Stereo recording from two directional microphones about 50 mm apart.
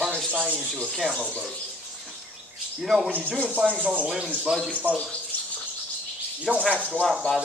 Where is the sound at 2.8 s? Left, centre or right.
Centre.